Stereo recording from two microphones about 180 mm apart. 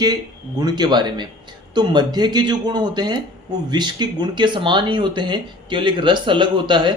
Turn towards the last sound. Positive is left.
turn(degrees=-25)  # may be behind; listen again after turning